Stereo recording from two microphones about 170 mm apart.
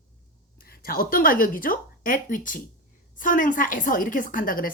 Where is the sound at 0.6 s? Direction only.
60° left (ahead or behind).